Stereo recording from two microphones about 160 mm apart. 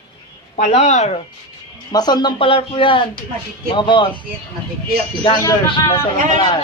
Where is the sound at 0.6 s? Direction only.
45° left (ahead or behind).